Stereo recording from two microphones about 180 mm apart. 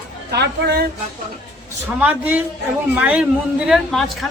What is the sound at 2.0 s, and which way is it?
A man's voice, 10° right (ahead or behind).